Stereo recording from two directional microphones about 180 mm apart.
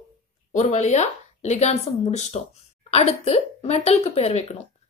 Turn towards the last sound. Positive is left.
turn(degrees=35)  # may be behind; listen again after turning